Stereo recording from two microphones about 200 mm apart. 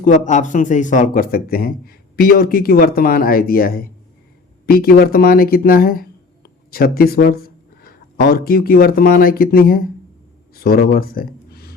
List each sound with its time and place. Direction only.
0.0 s speech: 40° left (ahead or behind)